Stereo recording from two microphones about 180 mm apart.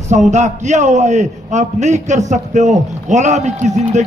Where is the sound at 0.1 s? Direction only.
40° right (ahead or behind).